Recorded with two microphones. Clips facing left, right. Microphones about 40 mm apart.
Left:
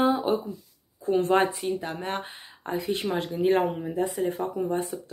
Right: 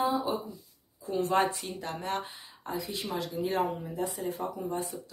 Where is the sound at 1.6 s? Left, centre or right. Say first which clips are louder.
Left 7 dB; centre.